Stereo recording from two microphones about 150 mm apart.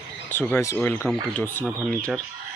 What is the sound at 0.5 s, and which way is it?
Speech, 20° left (ahead or behind).